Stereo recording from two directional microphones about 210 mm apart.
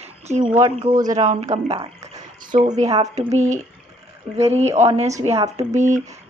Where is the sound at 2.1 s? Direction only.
35° right (ahead or behind).